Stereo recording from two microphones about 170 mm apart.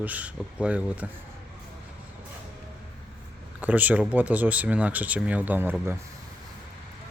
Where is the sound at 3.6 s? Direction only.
10° right (ahead or behind).